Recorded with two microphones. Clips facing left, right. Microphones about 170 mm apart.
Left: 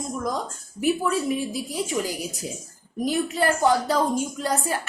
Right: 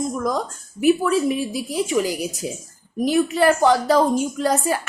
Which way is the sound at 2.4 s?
80° right.